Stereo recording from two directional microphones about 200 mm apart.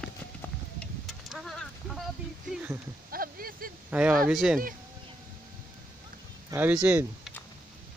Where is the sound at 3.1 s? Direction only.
45° right (ahead or behind).